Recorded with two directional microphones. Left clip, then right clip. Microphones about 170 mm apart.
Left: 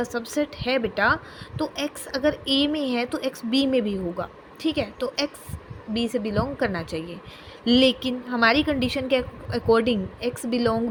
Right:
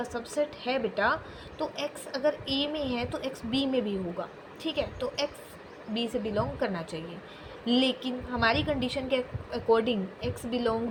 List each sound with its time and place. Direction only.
0.0 s a woman's voice: 55° left (ahead or behind)